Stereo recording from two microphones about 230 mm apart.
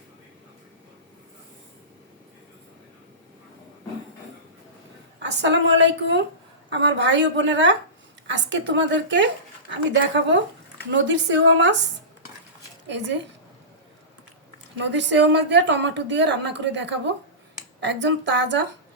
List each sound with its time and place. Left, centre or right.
5.2 s a woman's voice: right
12.9 s a woman's voice: right
14.8 s a woman's voice: right